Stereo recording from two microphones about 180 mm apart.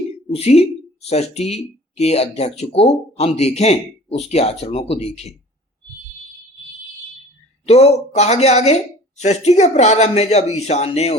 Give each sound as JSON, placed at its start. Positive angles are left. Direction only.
{"t": 0.3, "sound": "speech", "side_deg": 35}
{"t": 7.6, "sound": "speech", "side_deg": 35}